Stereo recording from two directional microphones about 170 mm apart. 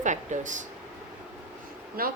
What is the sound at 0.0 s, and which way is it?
Speech, 45° right (ahead or behind).